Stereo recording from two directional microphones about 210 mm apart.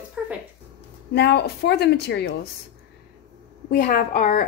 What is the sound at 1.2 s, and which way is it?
A woman's voice, 55° left (ahead or behind).